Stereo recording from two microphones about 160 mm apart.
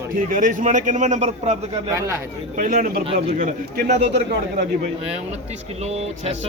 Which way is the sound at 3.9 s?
45° right (ahead or behind).